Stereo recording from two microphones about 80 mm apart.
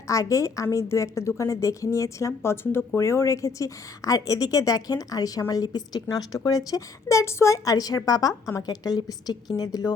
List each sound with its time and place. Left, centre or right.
0.1 s a woman's voice: left